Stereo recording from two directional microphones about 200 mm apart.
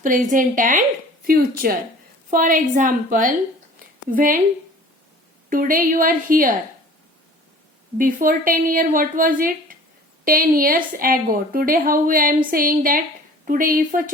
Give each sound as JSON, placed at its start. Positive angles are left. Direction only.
{"t": 0.0, "sound": "a woman's voice", "side_deg": -40}
{"t": 5.5, "sound": "a woman's voice", "side_deg": -45}
{"t": 7.9, "sound": "a woman's voice", "side_deg": -45}